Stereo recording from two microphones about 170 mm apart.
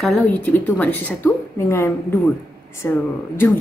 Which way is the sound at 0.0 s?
5° left (ahead or behind).